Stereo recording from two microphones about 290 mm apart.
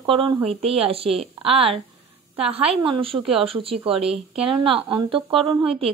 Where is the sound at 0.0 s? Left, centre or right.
Centre.